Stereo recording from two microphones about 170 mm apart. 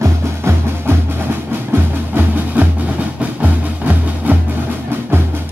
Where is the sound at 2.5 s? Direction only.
10° right (ahead or behind).